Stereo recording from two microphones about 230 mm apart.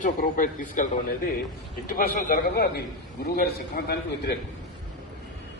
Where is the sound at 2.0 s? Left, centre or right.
Left.